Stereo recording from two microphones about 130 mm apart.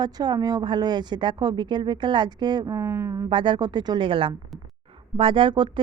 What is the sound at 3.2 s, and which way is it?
Speech, 40° right (ahead or behind).